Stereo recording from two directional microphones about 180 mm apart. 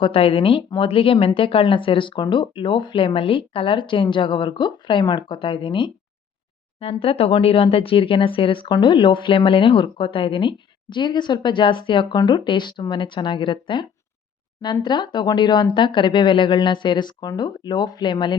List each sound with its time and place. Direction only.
0.0 s speech: 30° left (ahead or behind)